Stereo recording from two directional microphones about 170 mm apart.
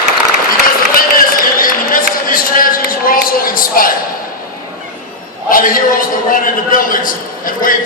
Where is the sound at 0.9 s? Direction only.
55° left (ahead or behind).